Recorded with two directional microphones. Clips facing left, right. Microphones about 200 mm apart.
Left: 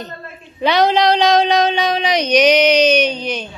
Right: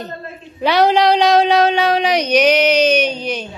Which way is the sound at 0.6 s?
5° right (ahead or behind).